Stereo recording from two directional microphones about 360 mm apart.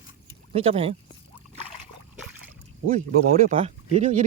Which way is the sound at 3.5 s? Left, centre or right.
Centre.